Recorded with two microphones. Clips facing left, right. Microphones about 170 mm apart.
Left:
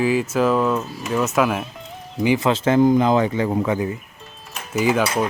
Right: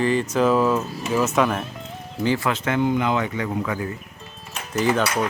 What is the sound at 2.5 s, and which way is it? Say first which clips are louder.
Speech: left 6 dB; 30° left (ahead or behind).